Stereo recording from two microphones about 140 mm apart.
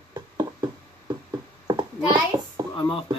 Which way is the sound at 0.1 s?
30° right (ahead or behind).